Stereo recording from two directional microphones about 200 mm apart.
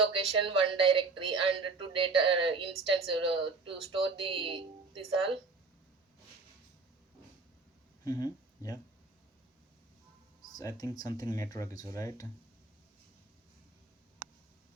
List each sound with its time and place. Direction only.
0.0 s a woman's voice: 25° right (ahead or behind)
8.0 s a sound: 15° left (ahead or behind)
10.5 s speech: 15° left (ahead or behind)